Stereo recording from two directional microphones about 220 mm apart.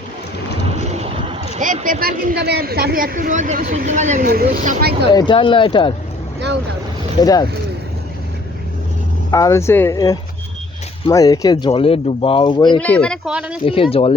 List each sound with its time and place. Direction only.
0.9 s speech: 25° right (ahead or behind); by 5.0 s 45° right (ahead or behind)
5.1 s speech: 20° left (ahead or behind)
7.2 s speech: 15° left (ahead or behind)
9.3 s speech: 15° left (ahead or behind)
12.8 s speech: 5° left (ahead or behind)
13.7 s speech: 25° left (ahead or behind)